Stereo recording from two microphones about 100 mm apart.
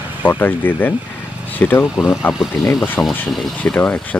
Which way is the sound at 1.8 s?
5° right (ahead or behind).